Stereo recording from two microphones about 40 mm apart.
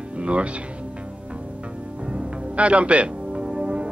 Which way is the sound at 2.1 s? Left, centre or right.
Right.